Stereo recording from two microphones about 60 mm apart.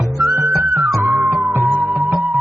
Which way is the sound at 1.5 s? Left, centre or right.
Right.